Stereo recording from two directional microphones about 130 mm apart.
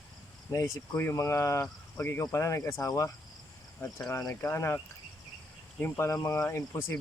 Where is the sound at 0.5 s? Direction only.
20° left (ahead or behind).